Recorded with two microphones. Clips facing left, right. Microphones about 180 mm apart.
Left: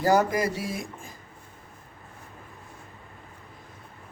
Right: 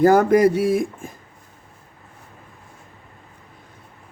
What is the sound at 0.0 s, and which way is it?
Speech, 55° right (ahead or behind).